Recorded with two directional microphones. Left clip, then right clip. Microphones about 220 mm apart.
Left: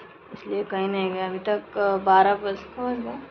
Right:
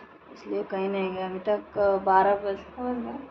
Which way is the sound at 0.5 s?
Centre (ahead or behind).